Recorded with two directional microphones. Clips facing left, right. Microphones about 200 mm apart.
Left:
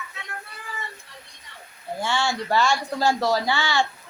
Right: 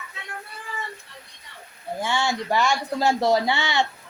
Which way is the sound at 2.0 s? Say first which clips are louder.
Even; 15° right (ahead or behind).